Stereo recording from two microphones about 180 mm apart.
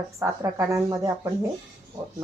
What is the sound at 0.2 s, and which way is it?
Speech, 15° right (ahead or behind).